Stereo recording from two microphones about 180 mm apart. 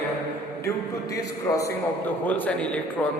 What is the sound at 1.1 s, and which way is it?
A man's voice, 20° left (ahead or behind).